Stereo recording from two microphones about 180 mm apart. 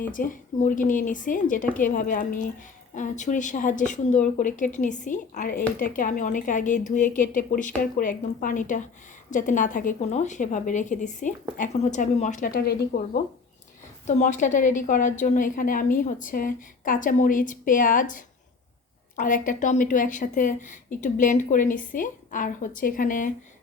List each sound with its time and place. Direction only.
0.1 s a woman's voice: 50° left (ahead or behind)
12.5 s speech: 60° left (ahead or behind)
14.1 s a woman's voice: 40° left (ahead or behind)